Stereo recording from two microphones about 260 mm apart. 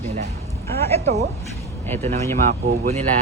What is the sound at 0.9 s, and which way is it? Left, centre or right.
Speech, right.